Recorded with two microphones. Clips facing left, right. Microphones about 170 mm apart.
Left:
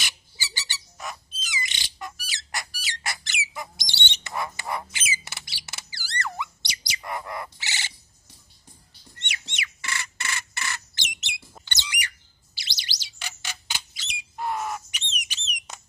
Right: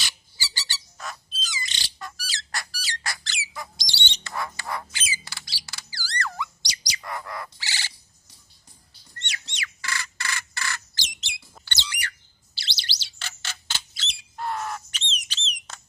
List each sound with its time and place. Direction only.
0.0 s squawk: 20° left (ahead or behind)
6.9 s bird: 20° left (ahead or behind)
9.1 s bird: 20° left (ahead or behind)